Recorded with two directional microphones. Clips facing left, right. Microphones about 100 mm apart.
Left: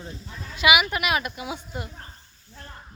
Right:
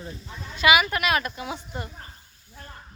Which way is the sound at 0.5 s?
10° left (ahead or behind).